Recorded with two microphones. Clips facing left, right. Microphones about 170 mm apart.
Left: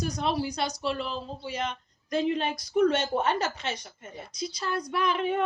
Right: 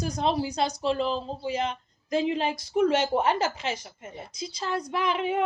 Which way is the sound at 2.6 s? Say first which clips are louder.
Even; 25° right (ahead or behind).